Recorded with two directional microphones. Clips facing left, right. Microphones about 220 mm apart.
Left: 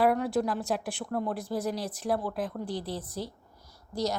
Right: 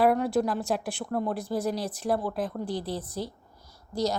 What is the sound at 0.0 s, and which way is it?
Speech, 35° right (ahead or behind).